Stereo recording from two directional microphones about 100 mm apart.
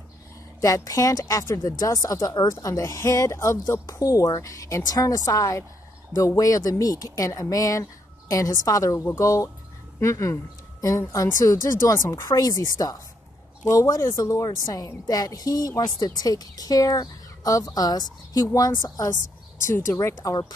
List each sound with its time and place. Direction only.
0.6 s a woman's voice: 35° left (ahead or behind)
8.9 s a woman's voice: 25° left (ahead or behind); by 19.1 s 40° left (ahead or behind)
19.6 s speech: 25° left (ahead or behind)
20.2 s speech: 40° left (ahead or behind)